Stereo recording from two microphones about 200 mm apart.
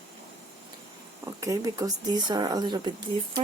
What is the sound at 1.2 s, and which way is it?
Speech, 15° right (ahead or behind).